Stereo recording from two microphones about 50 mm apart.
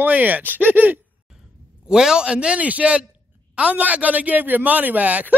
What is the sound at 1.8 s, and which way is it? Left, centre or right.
A man's voice, centre.